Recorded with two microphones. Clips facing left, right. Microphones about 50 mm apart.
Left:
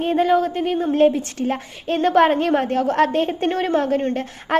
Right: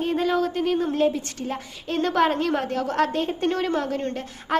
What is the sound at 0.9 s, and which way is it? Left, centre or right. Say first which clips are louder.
A woman's voice: left 6 dB; left.